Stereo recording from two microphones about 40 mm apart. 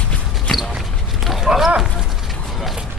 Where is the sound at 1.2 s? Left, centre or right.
Centre.